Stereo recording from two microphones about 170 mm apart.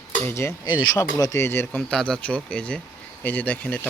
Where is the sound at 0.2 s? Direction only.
15° left (ahead or behind).